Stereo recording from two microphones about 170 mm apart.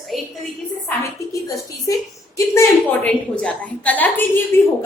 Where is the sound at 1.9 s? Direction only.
20° left (ahead or behind).